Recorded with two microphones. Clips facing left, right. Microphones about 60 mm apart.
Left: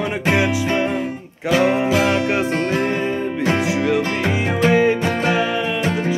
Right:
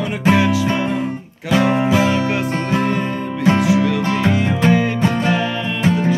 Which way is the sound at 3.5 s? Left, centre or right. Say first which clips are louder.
Right 2 dB; left.